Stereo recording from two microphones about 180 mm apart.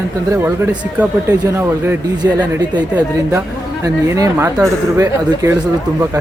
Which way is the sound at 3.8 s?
20° right (ahead or behind).